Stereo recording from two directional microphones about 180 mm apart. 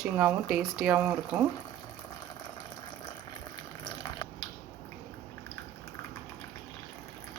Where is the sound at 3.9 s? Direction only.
25° left (ahead or behind).